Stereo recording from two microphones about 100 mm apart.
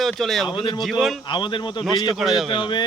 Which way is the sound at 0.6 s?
55° left (ahead or behind).